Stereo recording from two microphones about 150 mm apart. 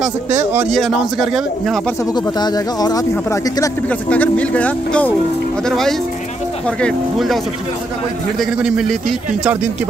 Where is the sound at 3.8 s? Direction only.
10° left (ahead or behind).